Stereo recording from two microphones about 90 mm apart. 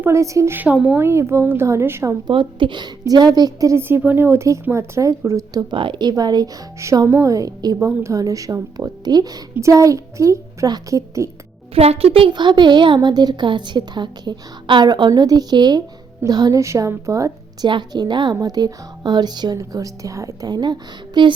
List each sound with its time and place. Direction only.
0.0 s a child's voice: 35° right (ahead or behind)
0.5 s speech: 15° right (ahead or behind)
0.9 s speech: 30° right (ahead or behind)
2.2 s a woman's voice: 65° right (ahead or behind)
3.1 s a woman's voice: 50° right (ahead or behind)
3.8 s a child's voice: 25° right (ahead or behind)
5.7 s a woman's voice: 65° right (ahead or behind); by 9.4 s 45° right (ahead or behind)
9.6 s a child's voice: 35° right (ahead or behind)
11.7 s speech: 90° right
12.3 s a woman's voice: 60° right (ahead or behind)
16.6 s a child's voice: 35° right (ahead or behind)
17.7 s a woman's voice: 55° right (ahead or behind); by 20.5 s 35° right (ahead or behind)
20.5 s a woman's voice: 50° right (ahead or behind)